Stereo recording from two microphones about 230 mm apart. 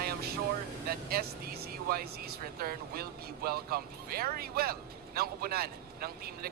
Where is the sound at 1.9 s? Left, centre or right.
Right.